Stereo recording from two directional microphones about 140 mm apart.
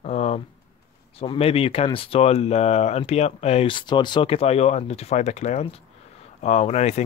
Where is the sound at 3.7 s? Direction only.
35° left (ahead or behind); by 7.0 s 50° left (ahead or behind).